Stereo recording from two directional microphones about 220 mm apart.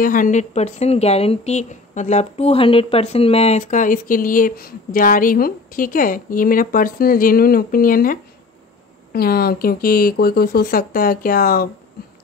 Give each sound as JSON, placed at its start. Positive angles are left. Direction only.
{"t": 0.0, "sound": "a woman's voice", "side_deg": 35}